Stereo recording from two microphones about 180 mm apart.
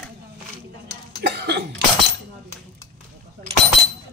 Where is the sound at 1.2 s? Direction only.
65° right (ahead or behind).